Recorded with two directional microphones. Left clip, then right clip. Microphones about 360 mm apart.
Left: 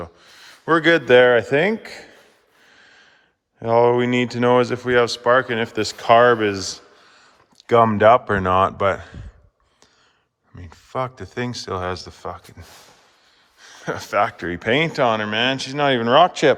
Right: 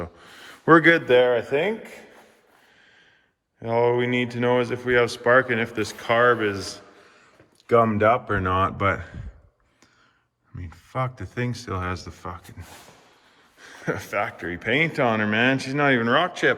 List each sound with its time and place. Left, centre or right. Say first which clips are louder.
0.0 s speech: left 1 dB; centre; by 2.0 s left
2.7 s snort: left 8 dB; centre
3.6 s speech: left 5 dB; centre
6.7 s a sound: left 1 dB; centre
7.7 s speech: left 5 dB; centre
10.6 s speech: left 3 dB; centre
13.6 s speech: left 1 dB; centre